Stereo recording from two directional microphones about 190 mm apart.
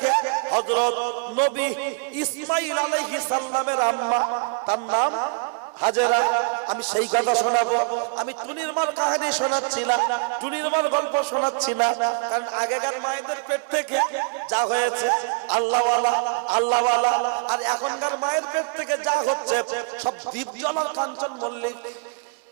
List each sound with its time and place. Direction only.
0.0 s a sound: 20° right (ahead or behind)
1.5 s a man's voice: 15° right (ahead or behind)
8.6 s a man's voice: 15° right (ahead or behind)
16.6 s a man's voice: 40° right (ahead or behind)
16.8 s a man's voice: 30° right (ahead or behind)